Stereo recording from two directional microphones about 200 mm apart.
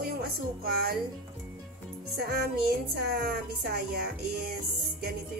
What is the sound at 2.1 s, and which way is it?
Speech, 55° right (ahead or behind).